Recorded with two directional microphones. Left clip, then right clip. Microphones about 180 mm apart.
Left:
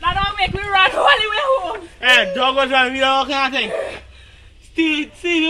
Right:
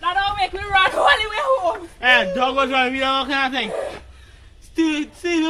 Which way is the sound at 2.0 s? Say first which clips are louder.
Left 2 dB; 70° right (ahead or behind).